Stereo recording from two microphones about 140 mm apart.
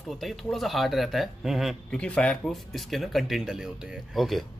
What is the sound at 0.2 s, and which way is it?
Speech, centre (ahead or behind).